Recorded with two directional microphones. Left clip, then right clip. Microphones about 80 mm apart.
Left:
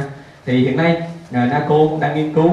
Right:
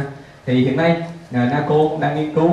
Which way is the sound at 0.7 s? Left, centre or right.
Left.